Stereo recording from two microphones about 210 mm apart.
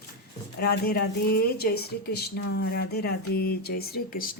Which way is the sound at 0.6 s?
50° left (ahead or behind).